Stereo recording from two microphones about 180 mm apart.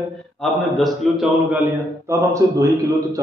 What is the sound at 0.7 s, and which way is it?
Speech, centre (ahead or behind).